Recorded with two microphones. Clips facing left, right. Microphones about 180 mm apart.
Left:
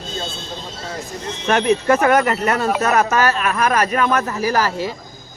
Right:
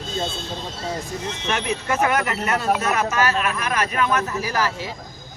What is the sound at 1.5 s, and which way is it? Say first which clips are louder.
Speech: left 9 dB; 50° left (ahead or behind).